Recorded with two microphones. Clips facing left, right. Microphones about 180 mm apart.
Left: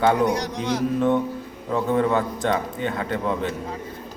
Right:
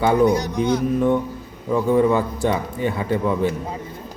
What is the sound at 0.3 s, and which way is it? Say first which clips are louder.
Speech: right 5 dB; 90° left.